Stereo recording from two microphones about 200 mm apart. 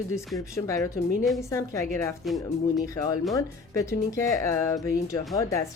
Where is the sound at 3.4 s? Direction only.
15° left (ahead or behind).